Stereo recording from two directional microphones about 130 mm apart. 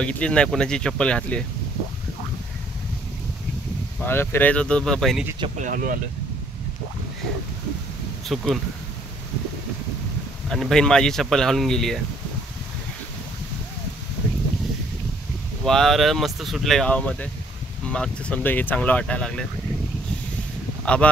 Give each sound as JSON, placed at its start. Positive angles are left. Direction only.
{"t": 0.0, "sound": "speech", "side_deg": 10}
{"t": 4.0, "sound": "speech", "side_deg": 15}
{"t": 5.6, "sound": "speech", "side_deg": -90}
{"t": 8.3, "sound": "speech", "side_deg": 0}
{"t": 10.5, "sound": "speech", "side_deg": 5}
{"t": 15.6, "sound": "speech", "side_deg": 5}
{"t": 20.8, "sound": "speech", "side_deg": 10}